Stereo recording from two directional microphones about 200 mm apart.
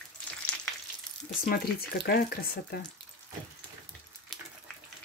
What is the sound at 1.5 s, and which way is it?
Speech, 50° left (ahead or behind).